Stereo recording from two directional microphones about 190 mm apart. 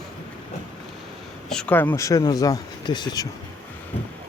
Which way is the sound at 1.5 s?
5° left (ahead or behind).